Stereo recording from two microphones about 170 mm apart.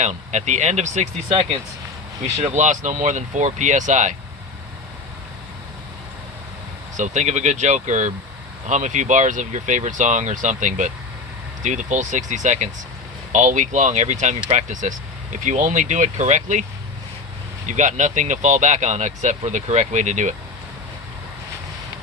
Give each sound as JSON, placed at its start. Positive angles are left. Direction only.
{"t": 0.0, "sound": "speech", "side_deg": -45}
{"t": 2.4, "sound": "speech", "side_deg": -45}
{"t": 6.9, "sound": "speech", "side_deg": -45}
{"t": 17.7, "sound": "speech", "side_deg": -45}